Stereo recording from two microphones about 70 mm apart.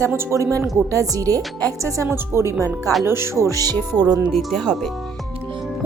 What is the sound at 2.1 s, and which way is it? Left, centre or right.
A woman's voice, right.